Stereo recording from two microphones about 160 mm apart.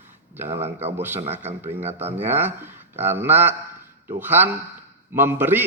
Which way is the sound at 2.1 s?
15° right (ahead or behind).